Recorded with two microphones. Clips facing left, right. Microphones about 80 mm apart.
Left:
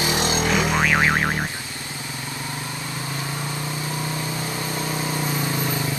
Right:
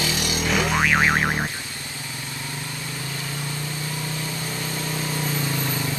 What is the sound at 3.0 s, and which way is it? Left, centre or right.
Vehicle, left.